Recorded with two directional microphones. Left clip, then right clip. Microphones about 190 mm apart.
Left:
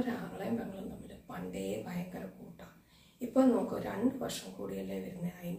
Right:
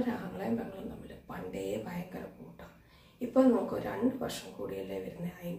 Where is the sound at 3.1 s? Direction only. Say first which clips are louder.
Right 2 dB; 5° right (ahead or behind).